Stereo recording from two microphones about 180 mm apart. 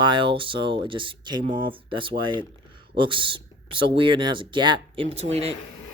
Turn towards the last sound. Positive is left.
turn(degrees=-35)  # may be behind; listen again after turning